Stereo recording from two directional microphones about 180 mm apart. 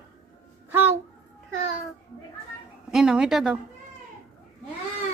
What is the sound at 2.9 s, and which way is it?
Speech, 5° right (ahead or behind).